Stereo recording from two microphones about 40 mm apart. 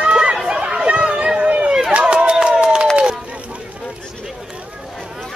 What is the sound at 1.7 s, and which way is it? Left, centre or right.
Run, centre.